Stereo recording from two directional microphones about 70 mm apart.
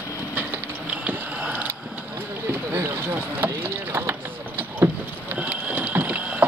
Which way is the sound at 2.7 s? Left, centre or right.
Right.